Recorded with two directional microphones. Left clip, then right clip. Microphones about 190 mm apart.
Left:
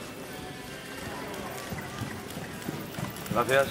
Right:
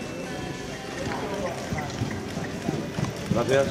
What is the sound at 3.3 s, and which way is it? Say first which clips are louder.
Speech: right 1 dB; 20° left (ahead or behind).